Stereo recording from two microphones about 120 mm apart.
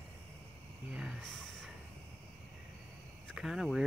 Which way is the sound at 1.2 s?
5° left (ahead or behind).